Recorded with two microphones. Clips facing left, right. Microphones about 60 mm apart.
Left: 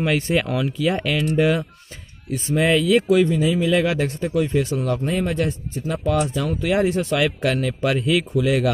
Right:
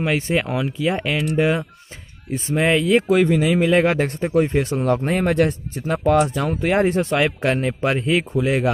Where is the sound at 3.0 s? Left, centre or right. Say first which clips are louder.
Right 1 dB; right.